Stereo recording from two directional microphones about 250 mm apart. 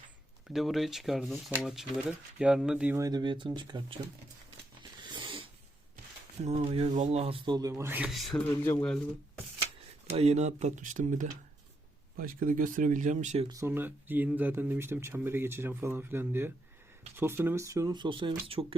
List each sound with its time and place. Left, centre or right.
0.4 s speech: centre
4.8 s a sound: centre
6.4 s speech: right; by 9.0 s centre
10.2 s speech: right
13.5 s speech: centre